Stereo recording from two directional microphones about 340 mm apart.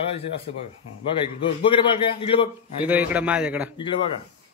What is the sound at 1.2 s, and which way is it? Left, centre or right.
A man's voice, centre.